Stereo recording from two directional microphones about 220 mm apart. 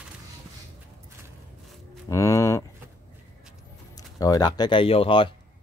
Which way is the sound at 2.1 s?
15° left (ahead or behind).